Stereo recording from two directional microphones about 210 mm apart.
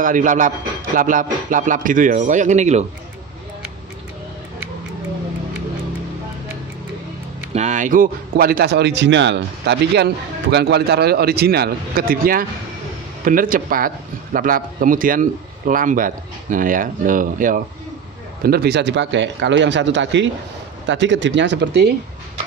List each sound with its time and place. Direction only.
0.0 s a man's voice: 40° right (ahead or behind)
7.5 s a man's voice: 35° right (ahead or behind); by 21.9 s 55° right (ahead or behind)